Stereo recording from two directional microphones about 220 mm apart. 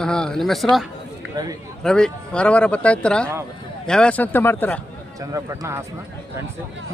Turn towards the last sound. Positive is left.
turn(degrees=-15)  # may be behind; listen again after turning